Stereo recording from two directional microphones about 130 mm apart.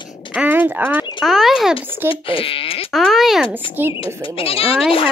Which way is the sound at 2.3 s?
45° left (ahead or behind).